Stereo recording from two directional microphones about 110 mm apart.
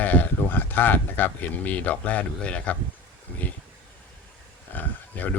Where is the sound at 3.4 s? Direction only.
15° left (ahead or behind).